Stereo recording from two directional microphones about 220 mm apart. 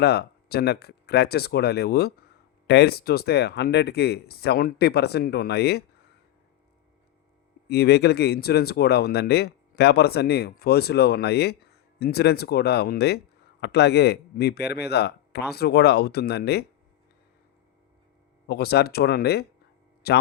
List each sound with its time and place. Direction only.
0.0 s speech: 50° left (ahead or behind)
7.7 s speech: 45° left (ahead or behind)
18.4 s speech: 45° left (ahead or behind)